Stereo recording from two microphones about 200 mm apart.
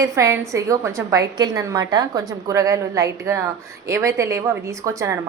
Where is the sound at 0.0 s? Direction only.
15° right (ahead or behind).